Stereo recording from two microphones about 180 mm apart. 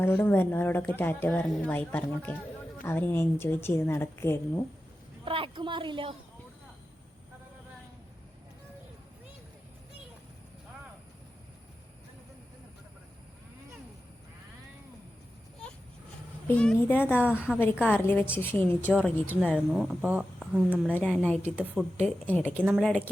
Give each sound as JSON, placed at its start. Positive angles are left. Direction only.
{"t": 0.0, "sound": "speech", "side_deg": 10}
{"t": 5.2, "sound": "a woman's voice", "side_deg": -30}
{"t": 16.5, "sound": "speech", "side_deg": 10}
{"t": 17.2, "sound": "a woman's voice", "side_deg": -5}
{"t": 17.8, "sound": "speech", "side_deg": 10}
{"t": 21.2, "sound": "speech", "side_deg": 5}
{"t": 22.6, "sound": "speech", "side_deg": -5}
{"t": 22.9, "sound": "speech", "side_deg": 5}